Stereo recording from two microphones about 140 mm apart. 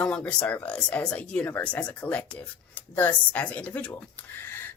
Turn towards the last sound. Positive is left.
turn(degrees=15)  # may be behind; listen again after turning